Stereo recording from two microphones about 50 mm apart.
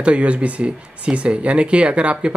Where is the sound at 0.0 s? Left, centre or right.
Right.